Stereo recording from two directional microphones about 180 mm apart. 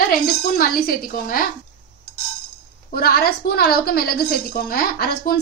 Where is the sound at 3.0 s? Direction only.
60° left (ahead or behind).